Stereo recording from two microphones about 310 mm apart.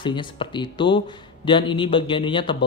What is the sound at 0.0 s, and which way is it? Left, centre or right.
Speech, centre.